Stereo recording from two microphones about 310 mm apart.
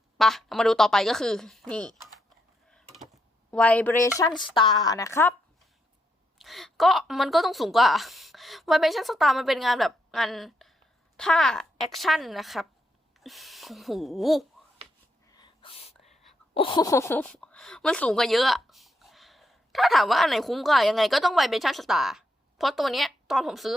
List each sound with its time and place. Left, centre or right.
0.2 s a woman's voice: centre
2.6 s a sound: centre
3.5 s a woman's voice: centre
6.4 s a woman's voice: centre
15.4 s a sound: centre
16.6 s a woman's voice: centre